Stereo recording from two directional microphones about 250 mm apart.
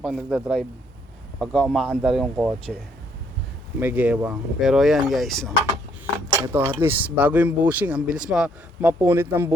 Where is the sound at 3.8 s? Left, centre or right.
Centre.